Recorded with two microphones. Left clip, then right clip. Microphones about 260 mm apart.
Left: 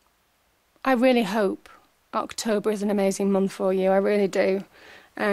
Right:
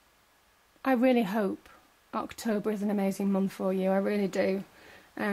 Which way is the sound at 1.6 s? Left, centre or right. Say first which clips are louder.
Left 5 dB; centre.